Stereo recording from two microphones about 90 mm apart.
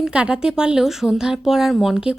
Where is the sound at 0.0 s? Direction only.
10° right (ahead or behind).